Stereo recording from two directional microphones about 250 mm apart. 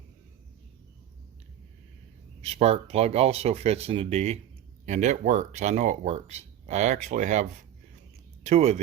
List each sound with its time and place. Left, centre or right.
2.4 s speech: right
8.4 s speech: right